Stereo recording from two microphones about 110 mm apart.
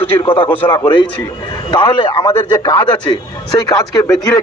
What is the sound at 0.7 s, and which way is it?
A man's voice, 40° left (ahead or behind).